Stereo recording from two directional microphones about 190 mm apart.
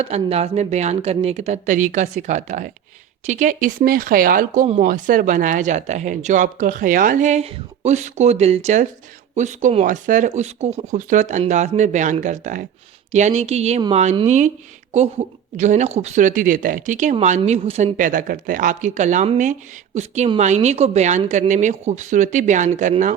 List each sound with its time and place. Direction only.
0.0 s speech: 35° right (ahead or behind)
15.5 s speech: 40° right (ahead or behind)